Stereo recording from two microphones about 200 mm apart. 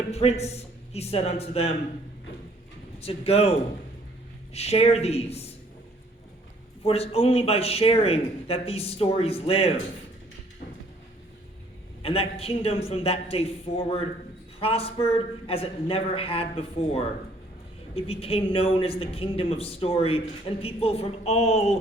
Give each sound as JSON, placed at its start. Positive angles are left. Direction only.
{"t": 0.1, "sound": "a man's voice", "side_deg": 30}
{"t": 3.0, "sound": "a man's voice", "side_deg": 30}
{"t": 4.5, "sound": "a man's voice", "side_deg": 30}
{"t": 6.8, "sound": "a man's voice", "side_deg": 30}
{"t": 12.0, "sound": "a man's voice", "side_deg": 30}